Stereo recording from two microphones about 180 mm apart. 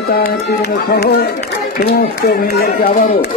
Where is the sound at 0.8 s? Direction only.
55° left (ahead or behind).